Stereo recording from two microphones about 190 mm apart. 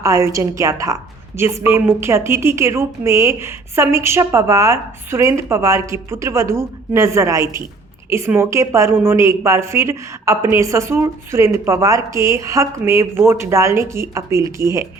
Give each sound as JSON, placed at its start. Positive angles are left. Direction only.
{"t": 0.0, "sound": "a woman's voice", "side_deg": -15}